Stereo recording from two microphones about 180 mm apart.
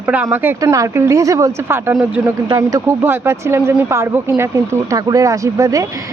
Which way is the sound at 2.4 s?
20° right (ahead or behind).